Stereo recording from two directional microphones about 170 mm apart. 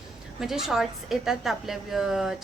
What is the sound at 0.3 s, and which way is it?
A woman's voice, centre (ahead or behind).